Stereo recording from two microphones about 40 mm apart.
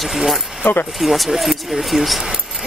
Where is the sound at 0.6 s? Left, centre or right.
Left.